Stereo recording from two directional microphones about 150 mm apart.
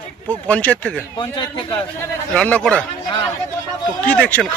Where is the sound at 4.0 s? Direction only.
10° left (ahead or behind).